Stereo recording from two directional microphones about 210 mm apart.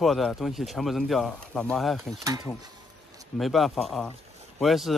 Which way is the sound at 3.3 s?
Centre (ahead or behind).